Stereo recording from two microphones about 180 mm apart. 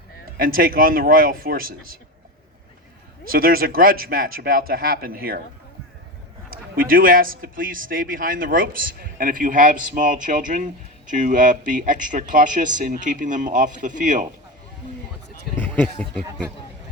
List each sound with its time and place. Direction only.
0.3 s speech: 50° right (ahead or behind)
3.3 s speech: 55° right (ahead or behind)
6.5 s speech: 50° right (ahead or behind)
15.5 s speech: 10° left (ahead or behind)